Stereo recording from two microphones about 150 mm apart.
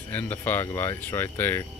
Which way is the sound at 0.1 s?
15° left (ahead or behind).